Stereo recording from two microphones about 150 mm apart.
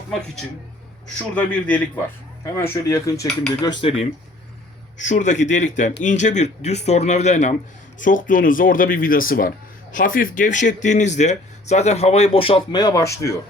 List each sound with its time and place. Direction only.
1.0 s a man's voice: 10° left (ahead or behind)
3.6 s cutlery: 30° left (ahead or behind)
4.9 s speech: 55° left (ahead or behind)
7.9 s speech: 60° left (ahead or behind); by 13.3 s 20° left (ahead or behind)